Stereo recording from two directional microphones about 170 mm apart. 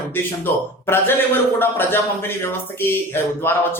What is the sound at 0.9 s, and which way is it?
A man's voice, 15° left (ahead or behind).